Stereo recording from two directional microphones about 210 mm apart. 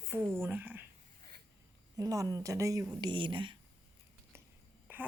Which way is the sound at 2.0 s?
15° right (ahead or behind).